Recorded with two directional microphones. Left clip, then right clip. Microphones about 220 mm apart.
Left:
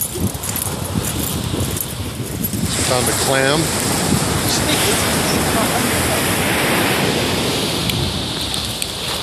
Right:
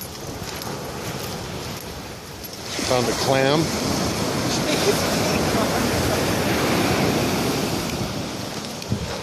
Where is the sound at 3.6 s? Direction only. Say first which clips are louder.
Left 4 dB; 45° right (ahead or behind).